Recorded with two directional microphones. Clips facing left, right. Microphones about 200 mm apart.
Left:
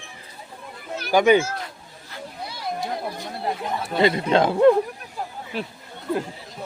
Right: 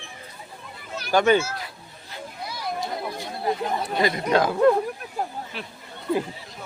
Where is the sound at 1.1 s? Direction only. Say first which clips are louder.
Left 2 dB; 15° left (ahead or behind).